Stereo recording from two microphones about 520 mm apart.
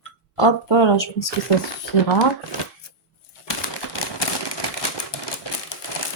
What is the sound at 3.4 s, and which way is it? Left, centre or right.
Typewriter, left.